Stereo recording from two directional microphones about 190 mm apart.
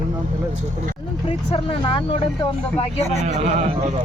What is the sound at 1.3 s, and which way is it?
Speech, 30° left (ahead or behind).